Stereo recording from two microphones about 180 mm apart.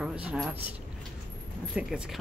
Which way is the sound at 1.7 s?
5° right (ahead or behind).